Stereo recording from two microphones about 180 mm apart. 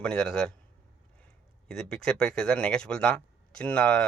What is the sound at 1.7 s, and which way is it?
Speech, 5° left (ahead or behind).